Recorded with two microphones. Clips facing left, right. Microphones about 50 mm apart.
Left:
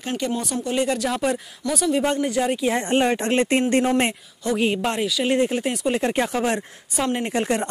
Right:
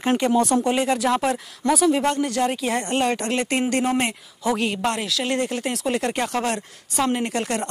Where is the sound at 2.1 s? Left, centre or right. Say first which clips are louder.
Even; centre.